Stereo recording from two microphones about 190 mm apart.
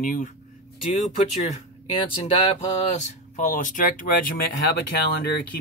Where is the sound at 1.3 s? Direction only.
30° left (ahead or behind).